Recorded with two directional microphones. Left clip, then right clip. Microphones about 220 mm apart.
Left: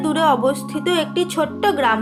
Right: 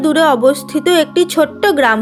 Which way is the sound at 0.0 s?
30° right (ahead or behind).